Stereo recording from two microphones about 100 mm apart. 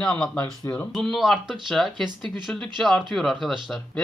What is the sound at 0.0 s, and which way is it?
Speech, 10° left (ahead or behind).